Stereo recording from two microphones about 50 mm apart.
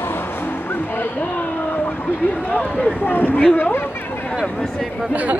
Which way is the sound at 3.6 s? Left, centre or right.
Left.